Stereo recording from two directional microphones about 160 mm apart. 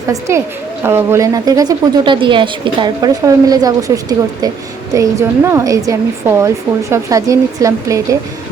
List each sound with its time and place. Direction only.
0.1 s a woman's voice: 20° right (ahead or behind)